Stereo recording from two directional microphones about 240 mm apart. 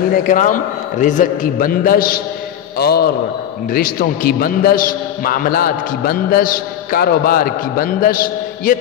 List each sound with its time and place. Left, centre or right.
0.1 s a man's voice: left